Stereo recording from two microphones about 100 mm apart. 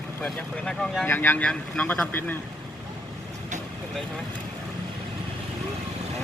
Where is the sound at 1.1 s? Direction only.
20° left (ahead or behind).